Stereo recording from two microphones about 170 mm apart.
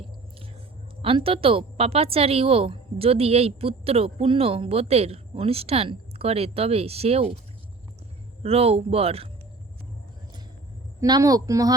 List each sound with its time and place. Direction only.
1.0 s speech: 30° right (ahead or behind)
8.4 s speech: 35° right (ahead or behind)
11.0 s speech: 20° right (ahead or behind)